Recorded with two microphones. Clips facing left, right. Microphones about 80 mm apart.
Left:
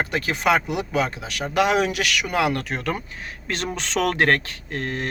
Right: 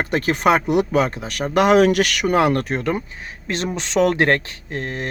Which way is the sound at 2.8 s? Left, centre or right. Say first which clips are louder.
Right 4 dB; right.